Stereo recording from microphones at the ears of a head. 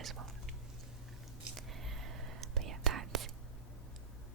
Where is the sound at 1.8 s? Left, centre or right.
Right.